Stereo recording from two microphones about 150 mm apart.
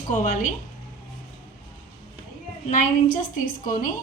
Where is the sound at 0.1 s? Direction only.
60° left (ahead or behind).